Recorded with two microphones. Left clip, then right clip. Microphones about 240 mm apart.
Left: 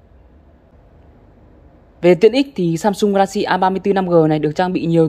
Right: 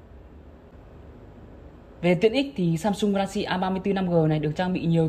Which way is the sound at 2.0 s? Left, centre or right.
Centre.